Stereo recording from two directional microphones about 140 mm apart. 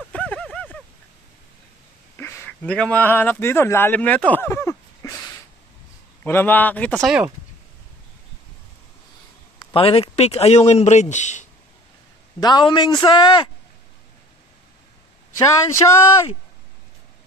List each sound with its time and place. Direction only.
0.1 s a sound: 10° left (ahead or behind)
2.1 s speech: 15° left (ahead or behind)
9.7 s speech: 40° left (ahead or behind); by 11.4 s 60° left (ahead or behind)
12.4 s a man's voice: 30° left (ahead or behind)
15.3 s speech: 20° left (ahead or behind)